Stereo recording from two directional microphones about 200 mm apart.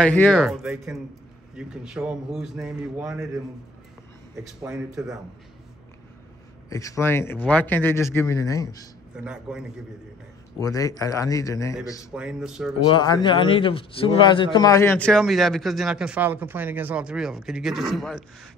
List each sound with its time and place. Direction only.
0.0 s speech: 5° left (ahead or behind)
0.4 s a man's voice: 5° right (ahead or behind)
6.7 s speech: 15° left (ahead or behind)
9.1 s a man's voice: 5° right (ahead or behind)
10.6 s speech: 15° left (ahead or behind)
12.1 s a man's voice: 5° right (ahead or behind)
12.8 s a man's voice: 25° left (ahead or behind); by 18.2 s centre (ahead or behind)